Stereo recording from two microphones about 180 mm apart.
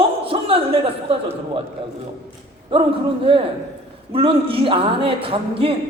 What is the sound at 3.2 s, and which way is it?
A woman's voice, 30° right (ahead or behind).